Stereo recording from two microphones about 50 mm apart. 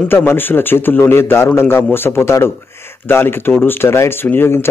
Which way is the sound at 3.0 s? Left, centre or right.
Left.